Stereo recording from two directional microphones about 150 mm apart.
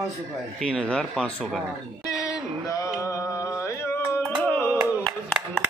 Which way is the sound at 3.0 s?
20° left (ahead or behind).